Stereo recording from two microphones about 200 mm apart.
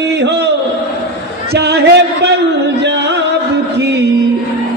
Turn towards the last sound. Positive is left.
turn(degrees=-55)  # may be behind; listen again after turning